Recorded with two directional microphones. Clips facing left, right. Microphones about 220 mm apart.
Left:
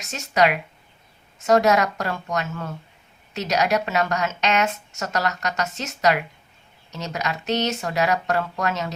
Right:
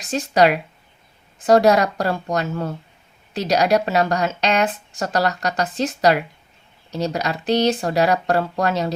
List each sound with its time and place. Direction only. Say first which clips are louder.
0.0 s speech: right 4 dB; 35° right (ahead or behind)